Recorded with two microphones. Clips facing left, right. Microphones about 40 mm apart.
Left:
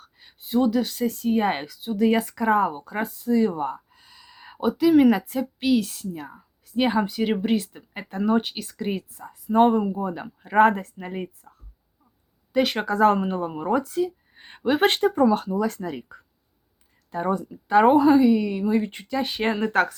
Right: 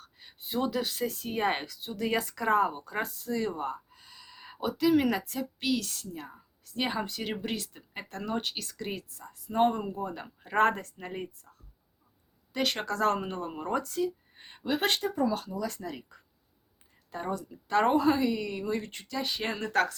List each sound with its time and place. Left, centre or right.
0.0 s speech: centre
12.5 s speech: centre
14.6 s speech: left
17.1 s speech: centre
17.5 s speech: centre
18.9 s speech: left